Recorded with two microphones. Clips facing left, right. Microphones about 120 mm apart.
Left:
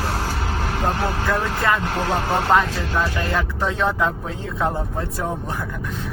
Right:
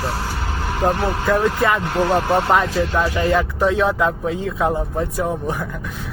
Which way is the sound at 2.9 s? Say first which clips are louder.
Right 3 dB; 10° right (ahead or behind).